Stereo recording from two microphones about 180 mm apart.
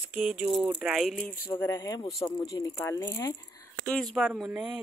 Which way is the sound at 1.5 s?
15° left (ahead or behind).